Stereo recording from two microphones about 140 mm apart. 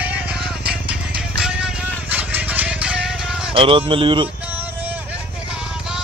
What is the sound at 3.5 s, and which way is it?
Speech, 40° right (ahead or behind).